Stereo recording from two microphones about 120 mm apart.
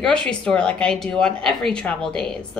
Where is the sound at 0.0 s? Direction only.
10° left (ahead or behind).